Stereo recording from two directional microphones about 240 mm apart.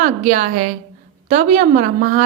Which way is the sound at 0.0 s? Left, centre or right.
Right.